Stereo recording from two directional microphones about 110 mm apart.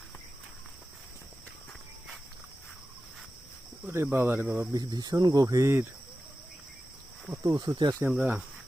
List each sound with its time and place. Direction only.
3.8 s speech: 20° right (ahead or behind)
4.7 s speech: 35° right (ahead or behind)
7.4 s speech: 35° right (ahead or behind)
8.2 s speech: 15° right (ahead or behind)